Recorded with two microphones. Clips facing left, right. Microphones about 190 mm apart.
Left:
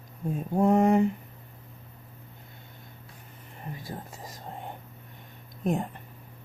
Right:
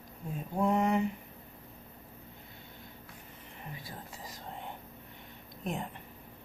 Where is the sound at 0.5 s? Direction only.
45° left (ahead or behind).